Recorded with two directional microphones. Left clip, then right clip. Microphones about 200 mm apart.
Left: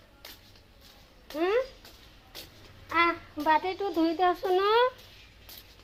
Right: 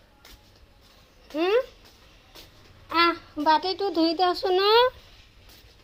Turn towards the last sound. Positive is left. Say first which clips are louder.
# right 4 dB
turn(degrees=-45)  # may be behind; listen again after turning